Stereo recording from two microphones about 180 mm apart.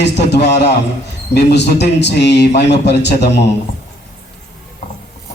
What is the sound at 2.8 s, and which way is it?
Music, 70° left (ahead or behind).